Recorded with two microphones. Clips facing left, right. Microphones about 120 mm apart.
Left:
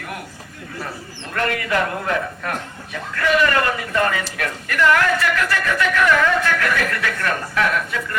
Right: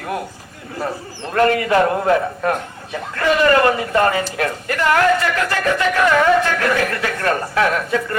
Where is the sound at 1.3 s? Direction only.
30° right (ahead or behind).